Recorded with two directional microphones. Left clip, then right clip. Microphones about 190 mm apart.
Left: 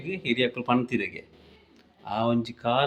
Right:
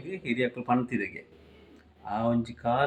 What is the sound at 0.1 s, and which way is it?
Speech, 5° right (ahead or behind).